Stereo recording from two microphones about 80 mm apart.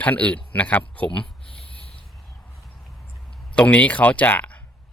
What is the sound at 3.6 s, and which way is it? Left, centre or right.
Speech, centre.